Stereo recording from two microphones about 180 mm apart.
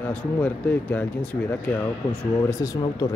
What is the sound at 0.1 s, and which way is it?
Speech, 10° left (ahead or behind).